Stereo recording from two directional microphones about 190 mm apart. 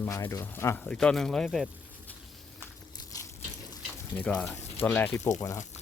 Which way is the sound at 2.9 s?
15° left (ahead or behind).